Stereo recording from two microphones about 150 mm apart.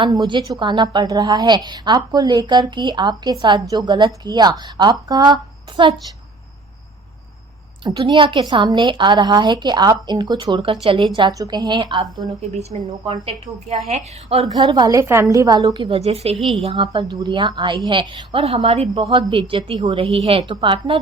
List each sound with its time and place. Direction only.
0.0 s a woman's voice: 30° right (ahead or behind)
7.9 s a woman's voice: 30° right (ahead or behind)
12.5 s a woman's voice: 50° right (ahead or behind)
14.5 s a woman's voice: 30° right (ahead or behind); by 16.4 s 45° right (ahead or behind)
16.4 s a woman's voice: centre (ahead or behind)
16.6 s a woman's voice: 35° right (ahead or behind)